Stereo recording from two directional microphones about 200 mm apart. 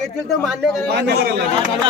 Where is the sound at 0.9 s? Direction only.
55° right (ahead or behind).